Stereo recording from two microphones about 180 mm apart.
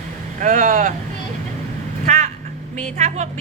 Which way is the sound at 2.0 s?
40° right (ahead or behind).